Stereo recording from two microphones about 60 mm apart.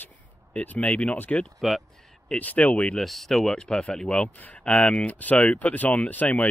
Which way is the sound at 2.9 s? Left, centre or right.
Centre.